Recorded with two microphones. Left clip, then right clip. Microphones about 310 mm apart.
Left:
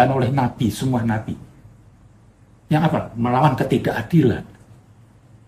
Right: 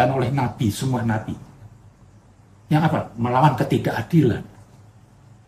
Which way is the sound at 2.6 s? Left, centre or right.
Centre.